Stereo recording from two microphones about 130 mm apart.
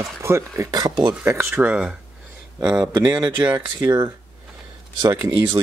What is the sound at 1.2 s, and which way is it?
Speech, 20° right (ahead or behind).